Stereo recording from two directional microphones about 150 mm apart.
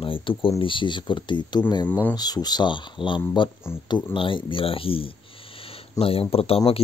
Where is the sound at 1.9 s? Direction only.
10° left (ahead or behind).